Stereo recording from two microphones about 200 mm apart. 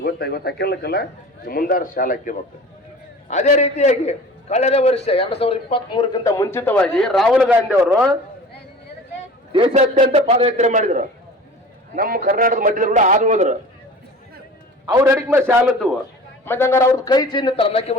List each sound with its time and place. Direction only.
0.0 s a man's voice: 50° left (ahead or behind); by 8.0 s 10° right (ahead or behind)
9.5 s a man's voice: 30° right (ahead or behind)
14.8 s a man's voice: 15° right (ahead or behind)
16.5 s a man's voice: 10° left (ahead or behind); by 17.9 s 30° left (ahead or behind)